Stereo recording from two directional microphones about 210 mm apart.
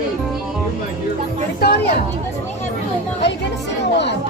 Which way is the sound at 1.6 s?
50° left (ahead or behind).